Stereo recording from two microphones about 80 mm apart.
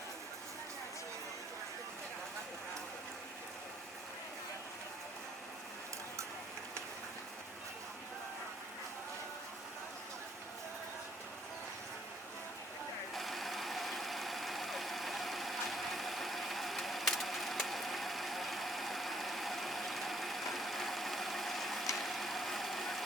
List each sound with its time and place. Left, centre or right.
13.1 s engine: centre
21.9 s vehicle: centre